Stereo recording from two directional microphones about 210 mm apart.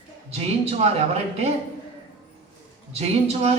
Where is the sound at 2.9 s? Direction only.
30° right (ahead or behind).